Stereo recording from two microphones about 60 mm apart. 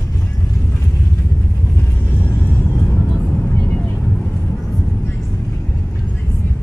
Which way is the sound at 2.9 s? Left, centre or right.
Left.